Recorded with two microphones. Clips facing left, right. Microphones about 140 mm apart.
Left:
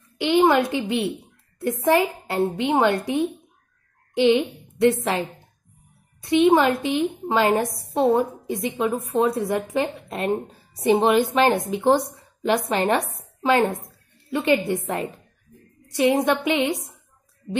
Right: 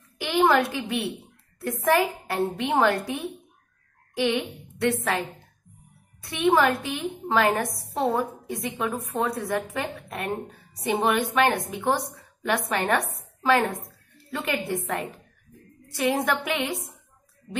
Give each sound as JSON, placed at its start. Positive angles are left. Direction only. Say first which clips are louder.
{"t": 0.2, "sound": "a woman's voice", "louder": "left 3 dB", "side_deg": 20}
{"t": 6.2, "sound": "a woman's voice", "louder": "left 5 dB", "side_deg": 25}
{"t": 13.7, "sound": "a woman's voice", "louder": "left 3 dB", "side_deg": 0}
{"t": 14.3, "sound": "a woman's voice", "louder": "left 7 dB", "side_deg": 25}
{"t": 15.9, "sound": "a woman's voice", "louder": "left 5 dB", "side_deg": 25}